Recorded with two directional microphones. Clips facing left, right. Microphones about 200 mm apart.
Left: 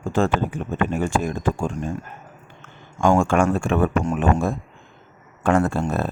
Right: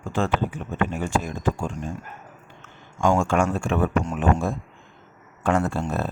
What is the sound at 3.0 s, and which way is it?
Speech, 55° left (ahead or behind).